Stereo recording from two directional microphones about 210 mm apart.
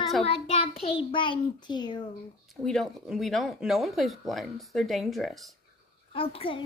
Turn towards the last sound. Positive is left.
turn(degrees=25)  # may be behind; listen again after turning